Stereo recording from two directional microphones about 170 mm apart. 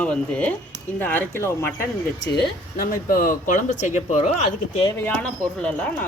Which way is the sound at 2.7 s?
55° left (ahead or behind).